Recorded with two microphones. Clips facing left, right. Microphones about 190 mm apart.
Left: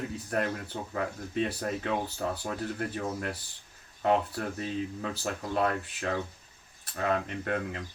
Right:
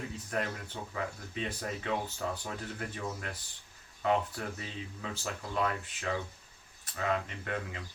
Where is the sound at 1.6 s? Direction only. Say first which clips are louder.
Left 4 dB; 50° left (ahead or behind).